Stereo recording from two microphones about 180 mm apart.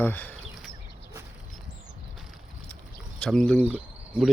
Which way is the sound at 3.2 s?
5° left (ahead or behind).